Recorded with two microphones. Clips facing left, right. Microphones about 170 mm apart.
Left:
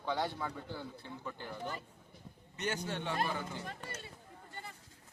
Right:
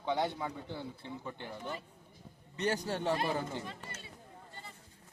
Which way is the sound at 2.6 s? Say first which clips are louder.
Right 4 dB; 35° right (ahead or behind).